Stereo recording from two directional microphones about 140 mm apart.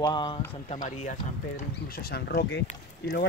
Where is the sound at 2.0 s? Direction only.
90° left.